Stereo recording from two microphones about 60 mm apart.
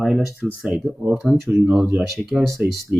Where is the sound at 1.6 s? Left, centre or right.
Centre.